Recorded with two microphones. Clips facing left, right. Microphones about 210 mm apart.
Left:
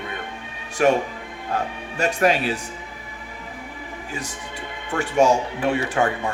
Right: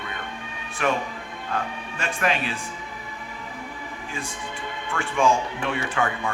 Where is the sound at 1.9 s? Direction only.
40° left (ahead or behind).